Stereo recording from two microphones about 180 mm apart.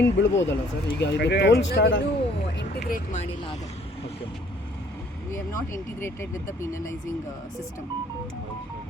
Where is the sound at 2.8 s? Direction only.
45° left (ahead or behind).